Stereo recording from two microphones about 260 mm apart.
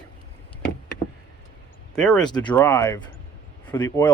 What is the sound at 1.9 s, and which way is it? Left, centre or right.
Speech, centre.